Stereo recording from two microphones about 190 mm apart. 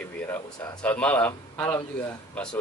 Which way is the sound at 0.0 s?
15° left (ahead or behind).